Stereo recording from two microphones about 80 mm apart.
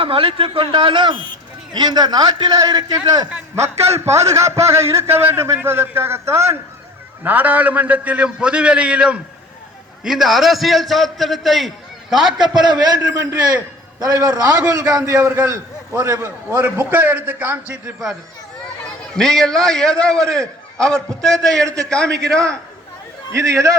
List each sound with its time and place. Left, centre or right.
0.2 s speech: right
1.7 s a man's voice: right
3.5 s a man's voice: right
7.3 s a man's voice: right; by 11.7 s centre
12.4 s a man's voice: right
19.1 s a man's voice: centre
21.6 s a man's voice: right
21.8 s a man's voice: centre
23.3 s a man's voice: right